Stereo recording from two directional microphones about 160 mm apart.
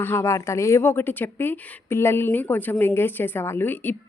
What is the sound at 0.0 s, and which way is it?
A woman's voice, 15° left (ahead or behind).